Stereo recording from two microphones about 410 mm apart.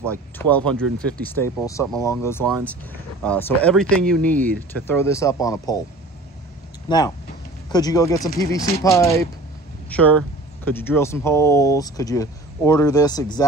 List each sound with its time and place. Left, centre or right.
0.4 s speech: centre
6.9 s speech: centre